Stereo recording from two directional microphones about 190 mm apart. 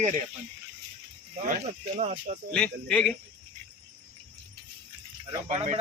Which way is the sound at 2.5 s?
5° left (ahead or behind).